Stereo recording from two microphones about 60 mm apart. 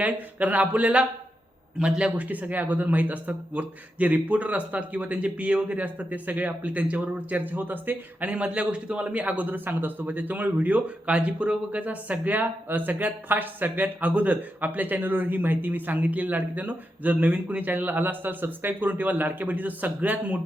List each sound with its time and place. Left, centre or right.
0.0 s a man's voice: right
2.2 s a man's voice: right